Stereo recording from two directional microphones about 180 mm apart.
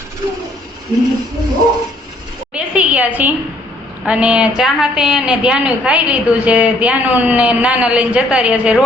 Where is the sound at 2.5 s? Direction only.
5° right (ahead or behind).